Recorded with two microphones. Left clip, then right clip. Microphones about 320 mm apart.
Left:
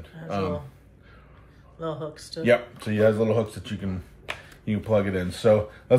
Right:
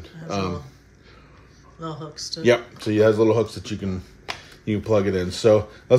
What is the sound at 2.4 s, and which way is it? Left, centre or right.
Speech, right.